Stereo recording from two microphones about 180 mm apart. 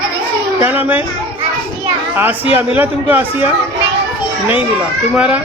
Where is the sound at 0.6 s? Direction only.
10° right (ahead or behind).